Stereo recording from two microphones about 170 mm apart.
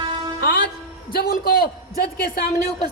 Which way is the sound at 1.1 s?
60° left (ahead or behind).